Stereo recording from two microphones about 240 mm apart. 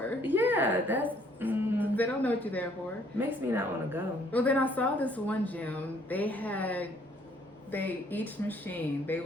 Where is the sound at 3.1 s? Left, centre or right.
Centre.